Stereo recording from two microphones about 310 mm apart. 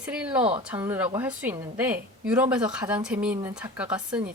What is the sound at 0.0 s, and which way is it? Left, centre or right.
Speech, centre.